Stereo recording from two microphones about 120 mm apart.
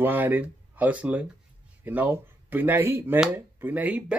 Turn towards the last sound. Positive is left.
turn(degrees=-10)  # may be behind; listen again after turning